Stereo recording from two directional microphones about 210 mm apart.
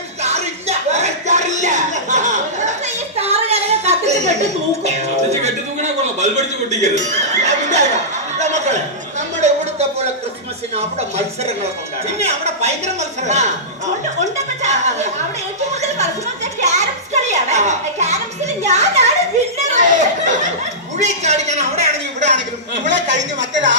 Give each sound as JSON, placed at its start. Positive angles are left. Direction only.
{"t": 0.2, "sound": "a sound", "side_deg": -30}
{"t": 12.2, "sound": "a man's voice", "side_deg": -30}
{"t": 14.6, "sound": "a man's voice", "side_deg": -35}
{"t": 16.6, "sound": "music", "side_deg": -35}
{"t": 17.2, "sound": "a man's voice", "side_deg": -35}
{"t": 23.0, "sound": "speech", "side_deg": -60}